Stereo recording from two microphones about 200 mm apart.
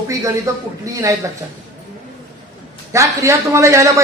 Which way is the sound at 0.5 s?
15° right (ahead or behind).